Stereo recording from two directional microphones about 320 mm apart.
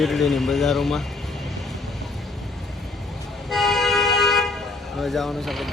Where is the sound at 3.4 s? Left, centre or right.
Centre.